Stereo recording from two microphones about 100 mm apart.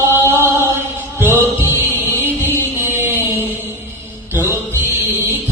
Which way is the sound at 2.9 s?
25° right (ahead or behind).